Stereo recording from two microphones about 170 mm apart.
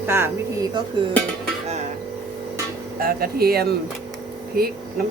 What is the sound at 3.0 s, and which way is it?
Speech, 60° right (ahead or behind).